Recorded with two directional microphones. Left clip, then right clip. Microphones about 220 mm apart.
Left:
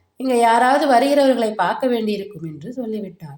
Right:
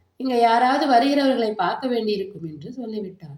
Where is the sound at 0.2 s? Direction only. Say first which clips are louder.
Left 3 dB; 45° left (ahead or behind).